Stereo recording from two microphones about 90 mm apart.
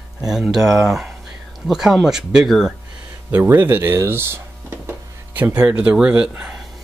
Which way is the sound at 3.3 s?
20° right (ahead or behind).